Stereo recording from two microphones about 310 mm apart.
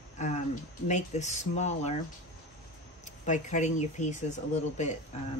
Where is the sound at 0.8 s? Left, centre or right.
Left.